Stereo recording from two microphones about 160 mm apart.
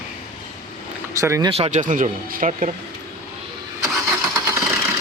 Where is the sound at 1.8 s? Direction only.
55° right (ahead or behind).